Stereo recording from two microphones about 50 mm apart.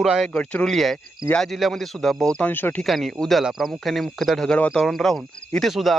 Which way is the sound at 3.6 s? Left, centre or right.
Centre.